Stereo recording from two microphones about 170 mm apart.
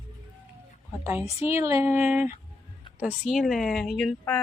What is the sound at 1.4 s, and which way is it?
A woman's voice, 15° right (ahead or behind).